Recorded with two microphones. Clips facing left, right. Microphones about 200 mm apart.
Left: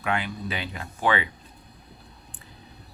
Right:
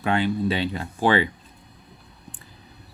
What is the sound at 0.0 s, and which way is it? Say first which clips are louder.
Speech: right 7 dB; 30° right (ahead or behind).